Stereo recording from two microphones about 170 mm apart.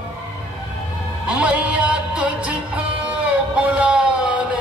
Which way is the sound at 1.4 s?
5° right (ahead or behind).